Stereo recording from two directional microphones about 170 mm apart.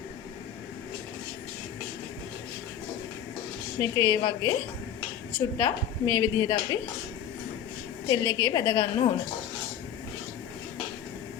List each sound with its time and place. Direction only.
3.8 s a woman's voice: 20° left (ahead or behind)
5.5 s a woman's voice: 20° left (ahead or behind)
8.0 s a woman's voice: 20° left (ahead or behind)